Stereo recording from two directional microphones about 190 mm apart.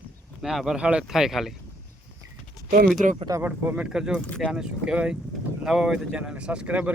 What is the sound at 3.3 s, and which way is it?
Speech, 10° right (ahead or behind).